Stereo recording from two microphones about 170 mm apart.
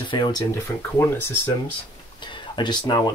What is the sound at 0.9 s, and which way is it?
Speech, 15° left (ahead or behind).